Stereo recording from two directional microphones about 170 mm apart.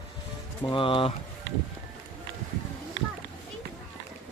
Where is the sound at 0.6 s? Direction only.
25° left (ahead or behind).